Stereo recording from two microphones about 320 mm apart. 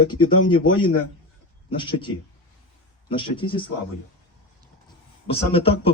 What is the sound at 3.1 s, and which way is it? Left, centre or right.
Speech, centre.